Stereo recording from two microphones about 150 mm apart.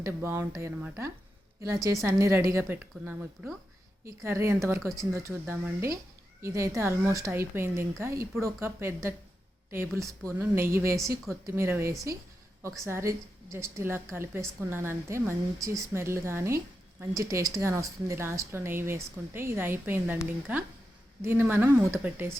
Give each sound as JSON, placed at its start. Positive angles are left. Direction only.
{"t": 0.0, "sound": "a woman's voice", "side_deg": -15}